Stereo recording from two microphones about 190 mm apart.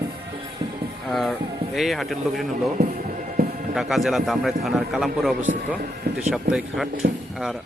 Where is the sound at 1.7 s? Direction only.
Centre (ahead or behind).